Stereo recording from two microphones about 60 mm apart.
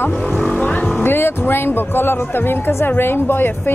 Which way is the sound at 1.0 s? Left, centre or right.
Left.